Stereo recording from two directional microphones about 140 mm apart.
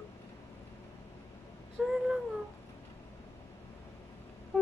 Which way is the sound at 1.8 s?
5° right (ahead or behind).